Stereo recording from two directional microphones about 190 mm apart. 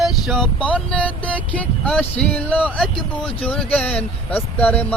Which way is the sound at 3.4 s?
5° left (ahead or behind).